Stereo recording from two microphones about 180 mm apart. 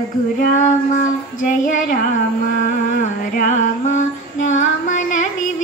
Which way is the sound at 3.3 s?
45° left (ahead or behind).